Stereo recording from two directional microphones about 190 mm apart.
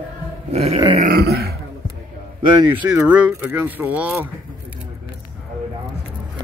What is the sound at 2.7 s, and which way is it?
Speech, 5° right (ahead or behind).